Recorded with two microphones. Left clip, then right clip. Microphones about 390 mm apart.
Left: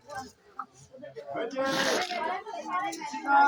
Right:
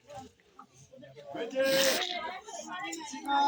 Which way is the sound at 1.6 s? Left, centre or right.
Right.